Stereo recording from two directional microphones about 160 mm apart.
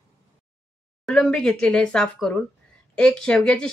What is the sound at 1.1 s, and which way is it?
Speech, 5° left (ahead or behind).